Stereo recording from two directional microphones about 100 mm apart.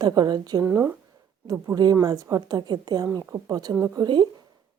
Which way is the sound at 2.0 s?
40° right (ahead or behind).